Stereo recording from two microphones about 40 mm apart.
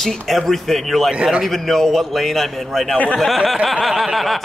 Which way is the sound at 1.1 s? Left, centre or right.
Centre.